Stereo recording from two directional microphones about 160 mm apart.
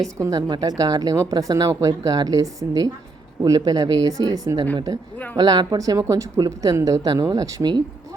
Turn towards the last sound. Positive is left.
turn(degrees=-25)  # may be behind; listen again after turning